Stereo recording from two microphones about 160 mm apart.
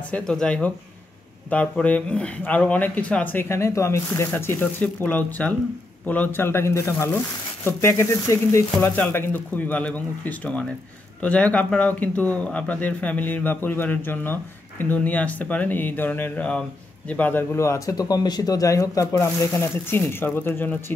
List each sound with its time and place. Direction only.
0.1 s speech: 5° left (ahead or behind)